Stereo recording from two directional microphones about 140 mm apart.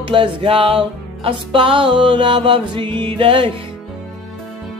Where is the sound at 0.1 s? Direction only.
40° right (ahead or behind).